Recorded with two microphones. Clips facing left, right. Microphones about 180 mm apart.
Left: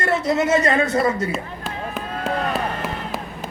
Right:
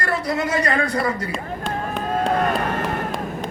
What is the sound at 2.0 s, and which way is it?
Run, 45° right (ahead or behind).